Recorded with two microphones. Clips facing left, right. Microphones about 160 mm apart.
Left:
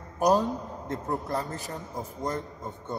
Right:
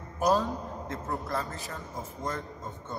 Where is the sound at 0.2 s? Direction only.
20° left (ahead or behind).